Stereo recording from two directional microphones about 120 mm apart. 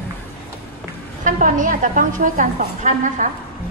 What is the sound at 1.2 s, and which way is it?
A woman's voice, 90° right.